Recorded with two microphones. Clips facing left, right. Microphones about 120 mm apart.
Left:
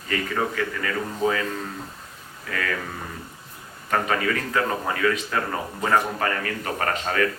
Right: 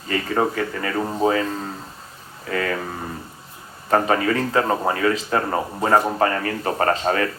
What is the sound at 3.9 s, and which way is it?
A man's voice, 30° right (ahead or behind).